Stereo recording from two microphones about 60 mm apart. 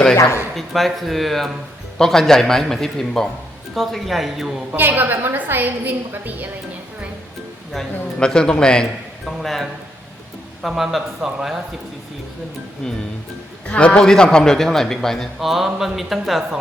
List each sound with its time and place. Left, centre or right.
0.2 s speech: left
0.5 s a man's voice: centre
4.8 s a woman's voice: right
7.7 s a man's voice: centre
12.8 s a man's voice: centre